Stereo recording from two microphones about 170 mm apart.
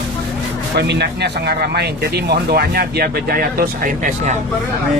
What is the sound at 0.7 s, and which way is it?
Speech, 80° right.